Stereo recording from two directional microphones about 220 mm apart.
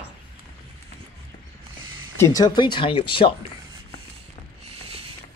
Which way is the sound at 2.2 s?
15° left (ahead or behind).